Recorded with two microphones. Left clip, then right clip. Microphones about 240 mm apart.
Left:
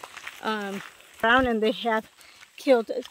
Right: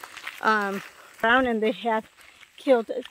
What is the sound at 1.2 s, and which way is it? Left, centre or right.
Speech, centre.